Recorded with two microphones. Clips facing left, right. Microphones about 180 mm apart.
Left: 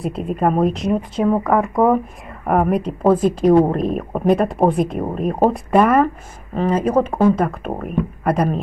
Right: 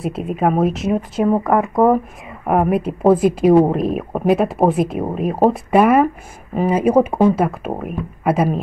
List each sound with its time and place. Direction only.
0.0 s a woman's voice: centre (ahead or behind)